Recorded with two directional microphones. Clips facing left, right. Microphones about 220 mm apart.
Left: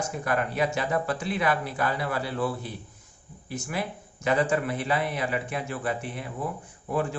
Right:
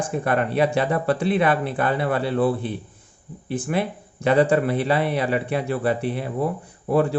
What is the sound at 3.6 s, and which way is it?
Speech, 35° right (ahead or behind).